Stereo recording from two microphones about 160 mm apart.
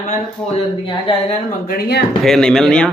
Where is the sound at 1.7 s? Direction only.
85° left.